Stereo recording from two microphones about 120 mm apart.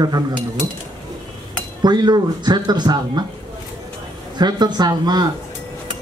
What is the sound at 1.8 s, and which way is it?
Speech, 35° right (ahead or behind).